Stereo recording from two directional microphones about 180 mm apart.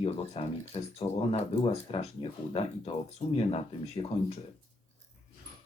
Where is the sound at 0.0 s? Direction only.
35° left (ahead or behind).